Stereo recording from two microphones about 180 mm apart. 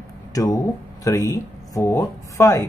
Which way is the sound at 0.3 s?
20° left (ahead or behind).